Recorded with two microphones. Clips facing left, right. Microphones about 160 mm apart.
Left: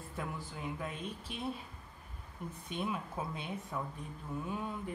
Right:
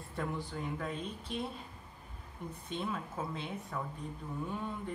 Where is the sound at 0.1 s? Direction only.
5° left (ahead or behind).